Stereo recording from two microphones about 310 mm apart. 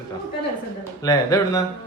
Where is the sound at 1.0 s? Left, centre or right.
Centre.